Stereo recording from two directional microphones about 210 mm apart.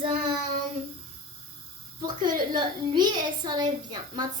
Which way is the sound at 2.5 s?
20° right (ahead or behind).